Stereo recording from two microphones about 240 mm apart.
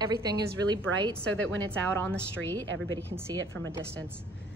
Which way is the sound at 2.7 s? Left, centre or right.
Right.